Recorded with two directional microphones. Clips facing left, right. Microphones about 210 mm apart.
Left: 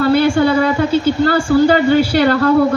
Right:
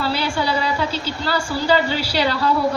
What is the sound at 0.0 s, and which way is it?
A woman's voice, 55° left (ahead or behind).